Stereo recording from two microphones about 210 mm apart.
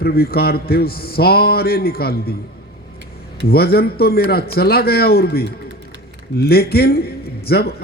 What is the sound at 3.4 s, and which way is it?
A man's voice, 45° left (ahead or behind).